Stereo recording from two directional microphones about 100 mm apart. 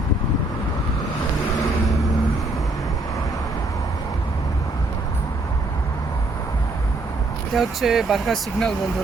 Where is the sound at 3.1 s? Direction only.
35° left (ahead or behind).